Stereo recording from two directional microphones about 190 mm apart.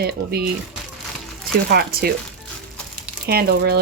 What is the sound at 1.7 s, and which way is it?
Speech, 55° right (ahead or behind).